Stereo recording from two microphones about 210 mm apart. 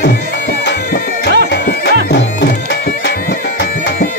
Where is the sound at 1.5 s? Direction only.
55° left (ahead or behind).